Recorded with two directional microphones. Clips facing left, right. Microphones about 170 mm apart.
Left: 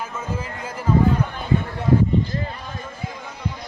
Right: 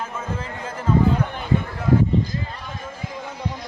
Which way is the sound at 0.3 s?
10° left (ahead or behind).